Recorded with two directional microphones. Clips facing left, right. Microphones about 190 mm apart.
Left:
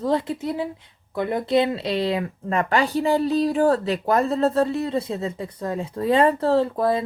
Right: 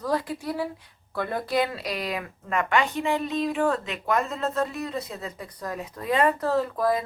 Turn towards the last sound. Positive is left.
turn(degrees=30)  # may be behind; listen again after turning